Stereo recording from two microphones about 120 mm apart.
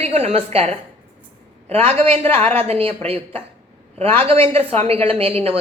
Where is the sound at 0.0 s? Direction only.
60° right (ahead or behind).